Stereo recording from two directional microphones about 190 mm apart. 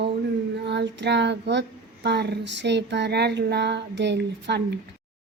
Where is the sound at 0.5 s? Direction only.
65° right (ahead or behind).